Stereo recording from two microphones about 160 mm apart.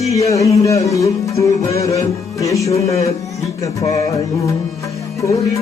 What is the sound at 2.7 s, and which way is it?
Speech, 40° left (ahead or behind).